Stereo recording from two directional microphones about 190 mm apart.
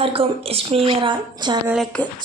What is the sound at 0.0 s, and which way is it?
A woman's voice, 30° right (ahead or behind).